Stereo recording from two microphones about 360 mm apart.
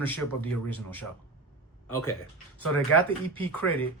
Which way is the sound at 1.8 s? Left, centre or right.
Left.